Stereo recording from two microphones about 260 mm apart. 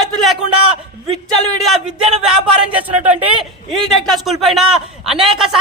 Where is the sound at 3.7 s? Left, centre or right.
Centre.